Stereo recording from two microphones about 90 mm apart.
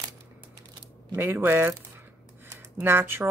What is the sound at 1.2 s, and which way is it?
Speech, 25° right (ahead or behind).